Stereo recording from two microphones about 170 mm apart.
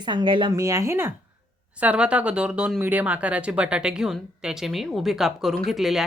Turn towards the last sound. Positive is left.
turn(degrees=0)  # may be behind; listen again after turning